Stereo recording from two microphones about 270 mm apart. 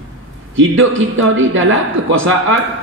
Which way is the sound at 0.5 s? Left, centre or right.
Right.